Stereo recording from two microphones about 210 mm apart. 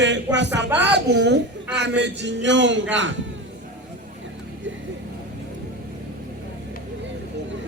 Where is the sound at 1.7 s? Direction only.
55° right (ahead or behind).